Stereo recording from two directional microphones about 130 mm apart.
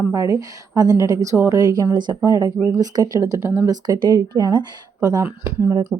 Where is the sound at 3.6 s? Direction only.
30° right (ahead or behind).